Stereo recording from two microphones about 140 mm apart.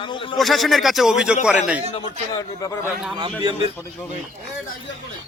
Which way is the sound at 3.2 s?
35° right (ahead or behind).